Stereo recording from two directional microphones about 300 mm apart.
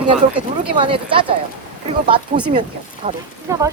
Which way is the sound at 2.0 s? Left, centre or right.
Centre.